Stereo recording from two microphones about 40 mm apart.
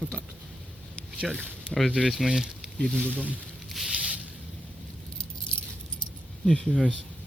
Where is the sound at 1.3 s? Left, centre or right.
Left.